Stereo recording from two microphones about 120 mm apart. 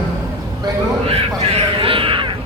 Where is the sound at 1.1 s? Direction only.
50° right (ahead or behind).